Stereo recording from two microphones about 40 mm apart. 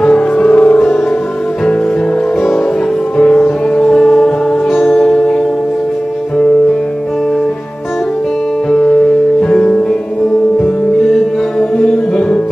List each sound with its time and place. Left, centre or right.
0.4 s music: left
3.8 s music: centre
4.7 s music: left
9.5 s music: left